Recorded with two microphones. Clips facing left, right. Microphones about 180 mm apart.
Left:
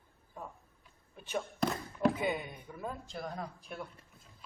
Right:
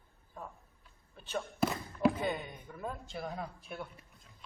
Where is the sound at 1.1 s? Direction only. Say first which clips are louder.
Left 1 dB; 10° left (ahead or behind).